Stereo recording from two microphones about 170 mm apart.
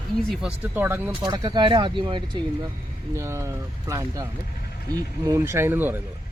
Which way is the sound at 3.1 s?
15° right (ahead or behind).